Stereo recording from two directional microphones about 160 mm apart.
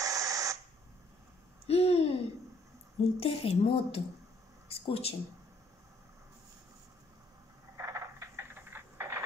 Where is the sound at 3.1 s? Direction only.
40° left (ahead or behind).